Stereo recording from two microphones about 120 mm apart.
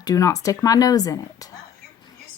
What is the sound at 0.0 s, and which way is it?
Speech, 30° left (ahead or behind).